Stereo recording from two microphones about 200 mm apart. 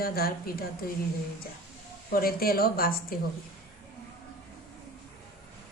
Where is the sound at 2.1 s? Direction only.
50° left (ahead or behind).